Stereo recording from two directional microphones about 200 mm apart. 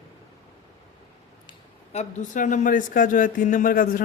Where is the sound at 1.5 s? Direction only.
35° left (ahead or behind).